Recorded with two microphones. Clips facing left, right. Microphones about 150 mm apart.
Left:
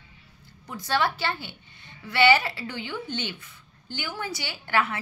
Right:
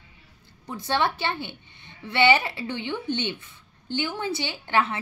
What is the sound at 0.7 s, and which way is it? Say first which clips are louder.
A woman's voice: right 1 dB; 25° right (ahead or behind).